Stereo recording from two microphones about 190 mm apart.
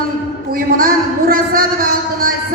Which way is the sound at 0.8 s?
50° right (ahead or behind).